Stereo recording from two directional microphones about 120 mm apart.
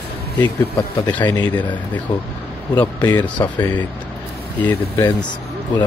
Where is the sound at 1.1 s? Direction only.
15° left (ahead or behind).